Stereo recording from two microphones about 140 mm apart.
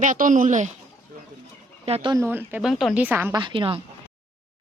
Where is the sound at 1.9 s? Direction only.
45° right (ahead or behind).